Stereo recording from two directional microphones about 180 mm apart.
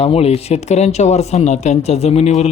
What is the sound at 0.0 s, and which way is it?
Speech, 35° left (ahead or behind).